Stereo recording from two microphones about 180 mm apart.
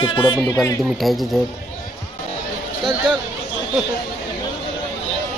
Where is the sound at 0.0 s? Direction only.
25° left (ahead or behind).